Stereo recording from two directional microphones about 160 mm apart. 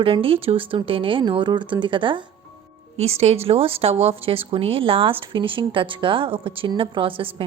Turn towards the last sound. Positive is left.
turn(degrees=-35)  # may be behind; listen again after turning